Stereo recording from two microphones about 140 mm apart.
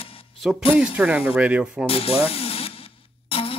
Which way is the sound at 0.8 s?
5° right (ahead or behind).